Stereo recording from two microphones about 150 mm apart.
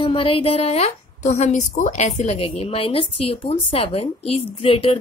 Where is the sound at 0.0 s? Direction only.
35° left (ahead or behind).